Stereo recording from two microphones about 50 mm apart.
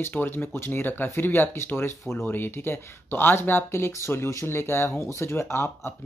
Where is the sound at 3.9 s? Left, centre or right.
Left.